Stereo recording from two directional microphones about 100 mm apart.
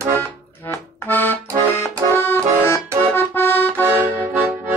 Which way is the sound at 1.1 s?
20° left (ahead or behind).